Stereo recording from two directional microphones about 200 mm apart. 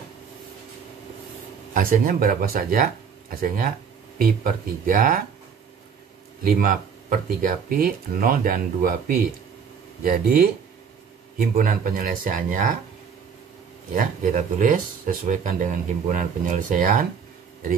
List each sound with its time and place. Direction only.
1.7 s speech: 45° right (ahead or behind)
6.4 s speech: 45° right (ahead or behind)
13.9 s speech: 40° right (ahead or behind)